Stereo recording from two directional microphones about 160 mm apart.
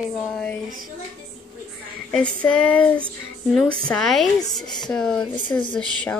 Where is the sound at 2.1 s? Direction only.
5° left (ahead or behind).